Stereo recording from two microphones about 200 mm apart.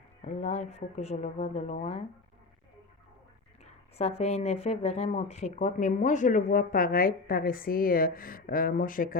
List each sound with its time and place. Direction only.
0.2 s speech: 35° left (ahead or behind)
3.6 s speech: 35° left (ahead or behind)